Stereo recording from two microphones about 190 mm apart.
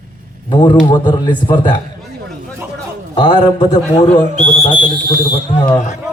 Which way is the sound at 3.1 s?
25° left (ahead or behind).